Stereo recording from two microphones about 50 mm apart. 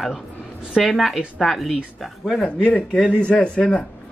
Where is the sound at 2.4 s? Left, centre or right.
Left.